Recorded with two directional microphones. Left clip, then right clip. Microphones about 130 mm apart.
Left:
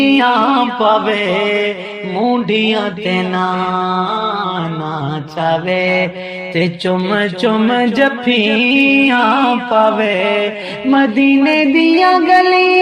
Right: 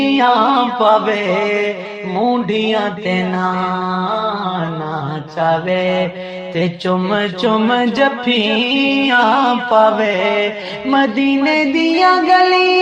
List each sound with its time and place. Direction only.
0.0 s mantra: 30° left (ahead or behind)
2.1 s music: 35° left (ahead or behind)
5.4 s music: 50° left (ahead or behind)
6.6 s a sound: 30° left (ahead or behind)